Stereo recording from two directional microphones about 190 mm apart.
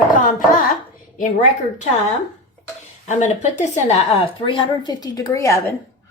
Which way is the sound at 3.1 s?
40° left (ahead or behind).